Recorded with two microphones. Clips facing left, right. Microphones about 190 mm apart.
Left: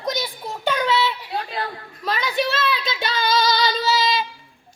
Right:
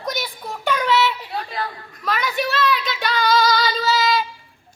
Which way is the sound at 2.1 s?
25° left (ahead or behind).